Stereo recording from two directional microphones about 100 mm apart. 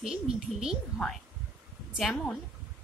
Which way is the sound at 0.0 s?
5° right (ahead or behind).